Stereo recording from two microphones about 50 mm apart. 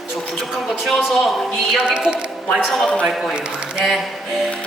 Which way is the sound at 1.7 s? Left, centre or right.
Centre.